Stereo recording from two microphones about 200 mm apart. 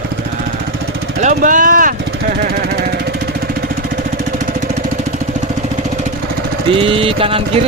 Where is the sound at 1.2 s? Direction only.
40° right (ahead or behind).